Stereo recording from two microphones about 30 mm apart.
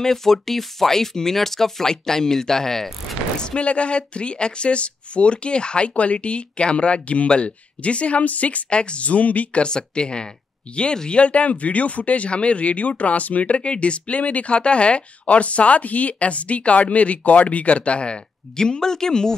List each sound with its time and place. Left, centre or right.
0.0 s speech: centre
3.5 s speech: left
8.2 s speech: left
8.6 s speech: left
9.0 s speech: left
9.6 s speech: left
11.3 s speech: left
12.3 s speech: left
13.6 s speech: left
18.6 s speech: left